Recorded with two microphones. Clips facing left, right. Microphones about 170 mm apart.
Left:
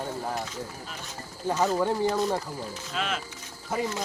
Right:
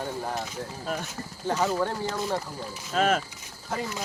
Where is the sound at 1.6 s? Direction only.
10° left (ahead or behind).